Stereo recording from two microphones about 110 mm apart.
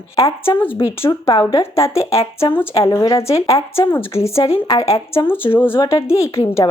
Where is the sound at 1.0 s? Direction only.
45° left (ahead or behind).